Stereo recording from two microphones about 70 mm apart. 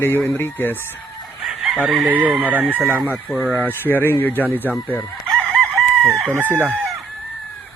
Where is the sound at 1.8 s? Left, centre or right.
Right.